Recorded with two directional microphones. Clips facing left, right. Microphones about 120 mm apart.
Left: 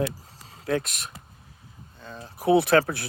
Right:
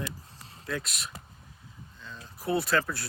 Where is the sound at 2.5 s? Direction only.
70° left (ahead or behind).